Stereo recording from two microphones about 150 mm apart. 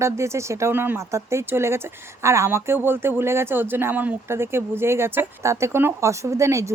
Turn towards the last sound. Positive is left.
turn(degrees=-20)  # may be behind; listen again after turning